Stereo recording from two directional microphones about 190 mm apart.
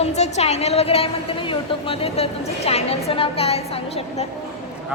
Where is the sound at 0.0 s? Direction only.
35° left (ahead or behind).